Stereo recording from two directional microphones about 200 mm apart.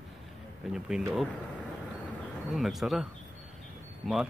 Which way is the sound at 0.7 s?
5° right (ahead or behind).